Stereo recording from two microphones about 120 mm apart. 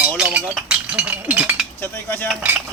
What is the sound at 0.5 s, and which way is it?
Speech, 10° right (ahead or behind).